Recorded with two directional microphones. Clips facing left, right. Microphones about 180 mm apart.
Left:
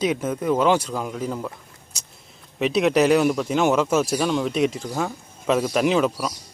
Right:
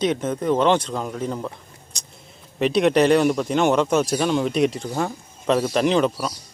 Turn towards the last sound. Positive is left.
turn(degrees=5)  # may be behind; listen again after turning